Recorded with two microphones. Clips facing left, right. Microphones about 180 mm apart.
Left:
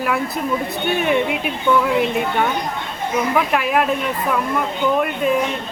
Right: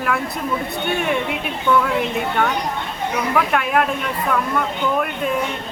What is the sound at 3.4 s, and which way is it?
Speech, 5° left (ahead or behind).